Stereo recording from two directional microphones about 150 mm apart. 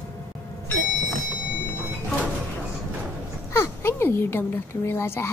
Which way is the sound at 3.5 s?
15° left (ahead or behind).